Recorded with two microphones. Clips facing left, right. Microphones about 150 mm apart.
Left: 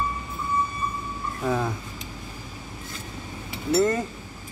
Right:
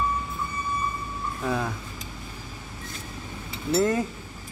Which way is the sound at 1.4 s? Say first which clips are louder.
Left 2 dB; 5° left (ahead or behind).